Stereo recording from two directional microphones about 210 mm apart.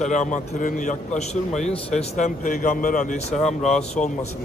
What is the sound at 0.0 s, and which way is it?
Speech, 35° left (ahead or behind).